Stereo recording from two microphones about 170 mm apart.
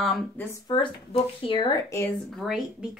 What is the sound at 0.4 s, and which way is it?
Speech, 15° left (ahead or behind).